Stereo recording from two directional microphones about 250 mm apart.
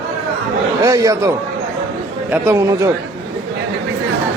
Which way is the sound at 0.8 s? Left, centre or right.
Centre.